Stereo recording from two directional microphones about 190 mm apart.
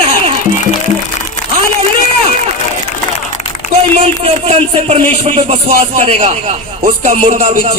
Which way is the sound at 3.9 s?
30° right (ahead or behind).